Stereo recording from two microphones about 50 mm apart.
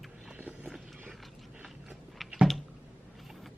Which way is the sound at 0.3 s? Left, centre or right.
Right.